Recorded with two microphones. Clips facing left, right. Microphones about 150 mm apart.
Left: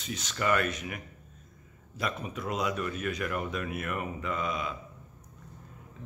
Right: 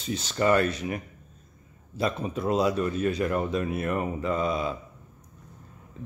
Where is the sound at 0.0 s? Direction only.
30° right (ahead or behind).